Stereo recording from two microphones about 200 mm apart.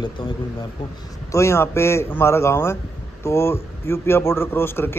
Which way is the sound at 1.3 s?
15° left (ahead or behind).